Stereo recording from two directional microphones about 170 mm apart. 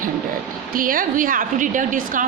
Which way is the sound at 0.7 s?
55° right (ahead or behind).